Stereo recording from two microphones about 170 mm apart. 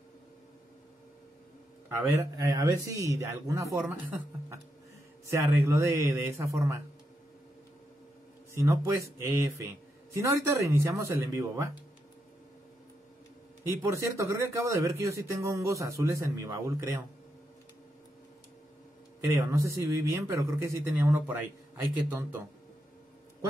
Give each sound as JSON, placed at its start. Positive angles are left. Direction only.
{"t": 1.9, "sound": "speech", "side_deg": -15}
{"t": 5.3, "sound": "a man's voice", "side_deg": -15}
{"t": 8.5, "sound": "a man's voice", "side_deg": -20}
{"t": 13.8, "sound": "a man's voice", "side_deg": -20}
{"t": 19.2, "sound": "a man's voice", "side_deg": -15}